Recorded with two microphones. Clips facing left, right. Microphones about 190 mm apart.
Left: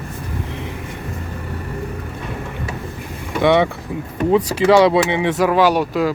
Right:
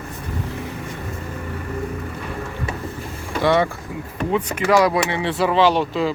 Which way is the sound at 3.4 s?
20° left (ahead or behind).